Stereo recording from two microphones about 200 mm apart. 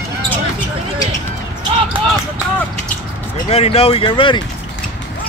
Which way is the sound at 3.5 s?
30° left (ahead or behind).